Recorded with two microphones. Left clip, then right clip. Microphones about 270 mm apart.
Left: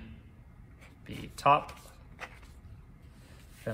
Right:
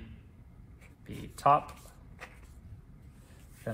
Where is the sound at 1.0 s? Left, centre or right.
Centre.